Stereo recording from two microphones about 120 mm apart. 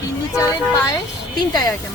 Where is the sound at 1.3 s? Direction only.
35° left (ahead or behind).